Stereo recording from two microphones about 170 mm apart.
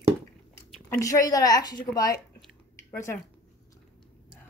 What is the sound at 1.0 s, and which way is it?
A woman's voice, 20° left (ahead or behind).